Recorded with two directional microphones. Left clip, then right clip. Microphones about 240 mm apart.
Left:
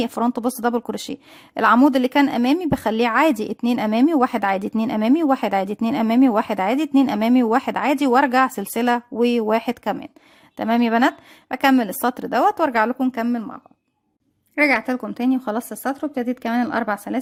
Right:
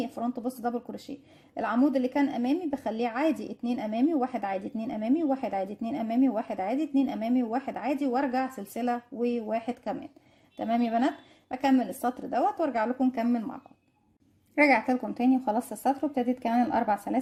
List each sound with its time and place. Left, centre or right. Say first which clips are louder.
0.0 s a woman's voice: left 11 dB; left